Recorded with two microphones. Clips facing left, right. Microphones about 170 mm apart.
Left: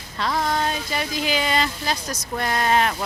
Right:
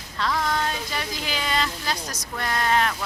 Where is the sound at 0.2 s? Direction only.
25° left (ahead or behind).